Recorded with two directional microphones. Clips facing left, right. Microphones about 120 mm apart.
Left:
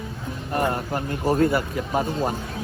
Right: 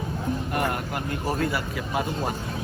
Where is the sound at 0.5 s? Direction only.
30° left (ahead or behind).